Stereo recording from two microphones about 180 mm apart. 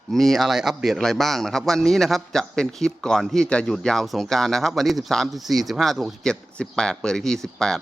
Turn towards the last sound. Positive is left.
turn(degrees=0)  # may be behind; listen again after turning